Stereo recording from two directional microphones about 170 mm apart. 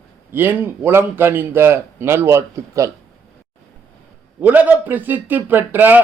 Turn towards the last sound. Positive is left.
turn(degrees=-10)  # may be behind; listen again after turning